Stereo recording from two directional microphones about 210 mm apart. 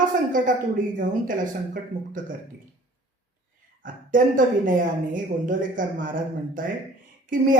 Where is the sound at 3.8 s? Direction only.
40° right (ahead or behind).